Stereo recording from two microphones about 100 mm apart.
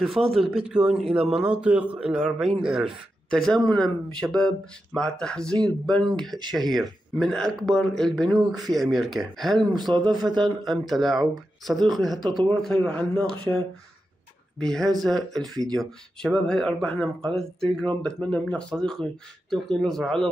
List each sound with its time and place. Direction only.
0.0 s speech: centre (ahead or behind)
3.3 s speech: 5° left (ahead or behind)
9.8 s speech: 45° right (ahead or behind)
10.6 s speech: centre (ahead or behind)
14.6 s speech: 5° left (ahead or behind)